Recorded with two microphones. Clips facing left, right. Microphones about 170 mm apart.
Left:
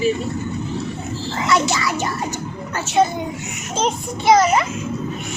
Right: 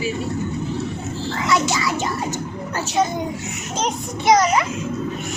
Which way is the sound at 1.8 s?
20° right (ahead or behind).